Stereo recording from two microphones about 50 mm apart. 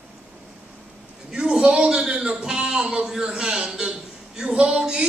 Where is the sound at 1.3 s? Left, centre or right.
Centre.